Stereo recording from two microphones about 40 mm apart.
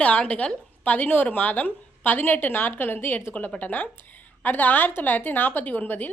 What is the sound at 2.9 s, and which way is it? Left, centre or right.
Speech, left.